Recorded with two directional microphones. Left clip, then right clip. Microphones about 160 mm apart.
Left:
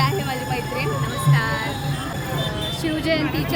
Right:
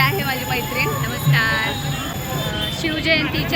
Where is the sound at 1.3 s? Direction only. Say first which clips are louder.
Right 6 dB; 35° left (ahead or behind).